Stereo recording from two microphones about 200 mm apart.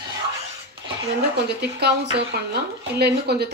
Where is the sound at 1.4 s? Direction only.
55° right (ahead or behind).